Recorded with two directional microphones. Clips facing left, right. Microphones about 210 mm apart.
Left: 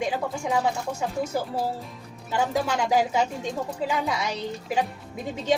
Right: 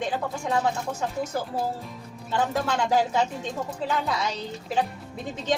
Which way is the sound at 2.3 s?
10° left (ahead or behind).